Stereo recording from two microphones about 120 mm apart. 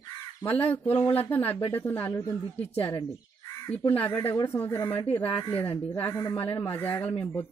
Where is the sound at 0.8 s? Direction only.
15° left (ahead or behind).